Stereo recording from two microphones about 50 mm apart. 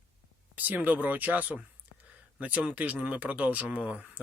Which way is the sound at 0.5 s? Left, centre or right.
Right.